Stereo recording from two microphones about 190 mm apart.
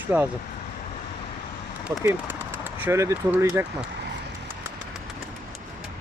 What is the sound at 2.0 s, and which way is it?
Speech, 10° right (ahead or behind).